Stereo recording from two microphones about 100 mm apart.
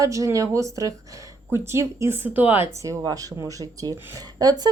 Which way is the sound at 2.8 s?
35° right (ahead or behind).